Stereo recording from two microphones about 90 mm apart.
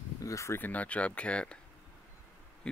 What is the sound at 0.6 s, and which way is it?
Speech, 15° left (ahead or behind).